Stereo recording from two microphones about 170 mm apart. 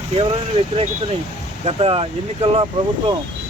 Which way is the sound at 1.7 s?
35° right (ahead or behind).